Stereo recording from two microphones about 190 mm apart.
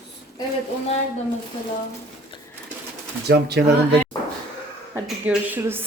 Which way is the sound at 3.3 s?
60° right (ahead or behind).